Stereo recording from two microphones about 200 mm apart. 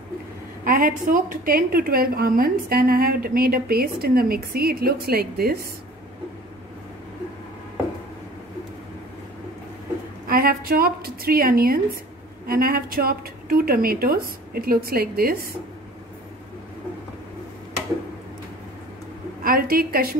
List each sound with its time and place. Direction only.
0.7 s a woman's voice: 45° right (ahead or behind)
10.2 s a woman's voice: 45° right (ahead or behind)
19.4 s a woman's voice: 45° right (ahead or behind)